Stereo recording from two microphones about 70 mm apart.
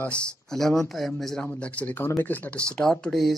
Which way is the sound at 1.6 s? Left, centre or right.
Centre.